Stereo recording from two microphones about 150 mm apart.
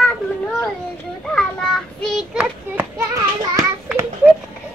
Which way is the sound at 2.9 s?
20° right (ahead or behind).